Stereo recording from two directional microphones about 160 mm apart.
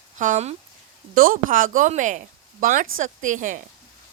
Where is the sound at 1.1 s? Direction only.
60° right (ahead or behind).